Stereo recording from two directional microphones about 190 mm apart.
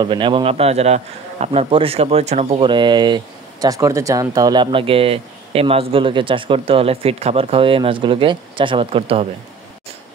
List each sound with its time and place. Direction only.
0.0 s a man's voice: 25° right (ahead or behind)